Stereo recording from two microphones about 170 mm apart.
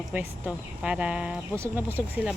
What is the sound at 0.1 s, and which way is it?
Speech, 10° right (ahead or behind).